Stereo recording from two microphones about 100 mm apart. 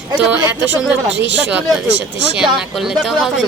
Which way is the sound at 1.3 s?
15° right (ahead or behind).